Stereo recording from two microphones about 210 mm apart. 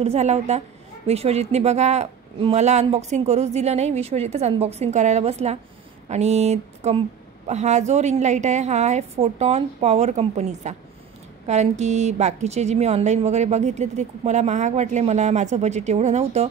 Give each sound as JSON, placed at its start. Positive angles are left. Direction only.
{"t": 0.0, "sound": "a woman's voice", "side_deg": -30}